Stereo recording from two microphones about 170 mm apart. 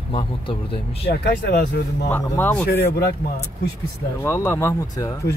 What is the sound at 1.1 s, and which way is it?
Speech, 70° left (ahead or behind).